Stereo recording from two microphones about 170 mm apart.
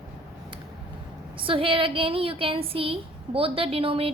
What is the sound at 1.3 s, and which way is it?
A woman's voice, 30° right (ahead or behind).